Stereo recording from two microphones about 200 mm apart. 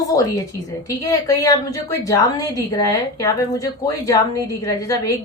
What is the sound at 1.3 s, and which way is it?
A woman's voice, 15° left (ahead or behind).